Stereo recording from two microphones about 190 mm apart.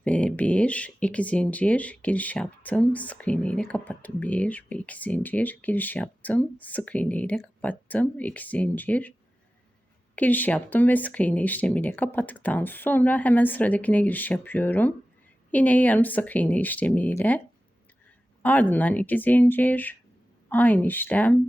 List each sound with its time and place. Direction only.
0.0 s speech: 5° left (ahead or behind)
10.2 s speech: 10° left (ahead or behind)
18.4 s speech: 10° left (ahead or behind)